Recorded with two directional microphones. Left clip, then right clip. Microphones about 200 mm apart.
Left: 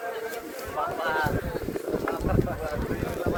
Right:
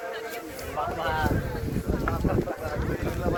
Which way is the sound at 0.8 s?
50° right (ahead or behind).